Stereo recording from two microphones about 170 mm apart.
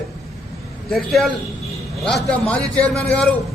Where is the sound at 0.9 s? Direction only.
Centre (ahead or behind).